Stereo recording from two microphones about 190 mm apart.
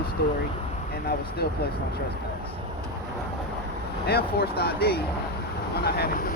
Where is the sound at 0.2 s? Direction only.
60° left (ahead or behind).